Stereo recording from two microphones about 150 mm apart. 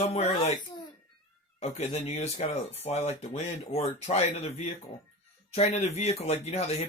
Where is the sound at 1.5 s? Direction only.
45° left (ahead or behind).